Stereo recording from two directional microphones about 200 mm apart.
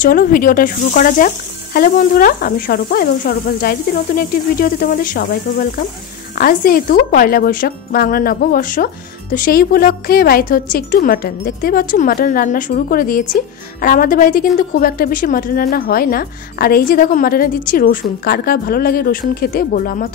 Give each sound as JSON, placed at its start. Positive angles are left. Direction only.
{"t": 0.0, "sound": "speech", "side_deg": 45}